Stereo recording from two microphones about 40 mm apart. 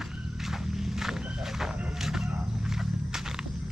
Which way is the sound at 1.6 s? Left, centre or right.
Centre.